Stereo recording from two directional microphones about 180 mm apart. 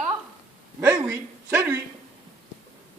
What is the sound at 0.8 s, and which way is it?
Speech, 15° right (ahead or behind).